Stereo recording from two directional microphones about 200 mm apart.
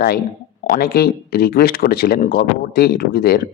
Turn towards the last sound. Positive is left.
turn(degrees=50)  # may be behind; listen again after turning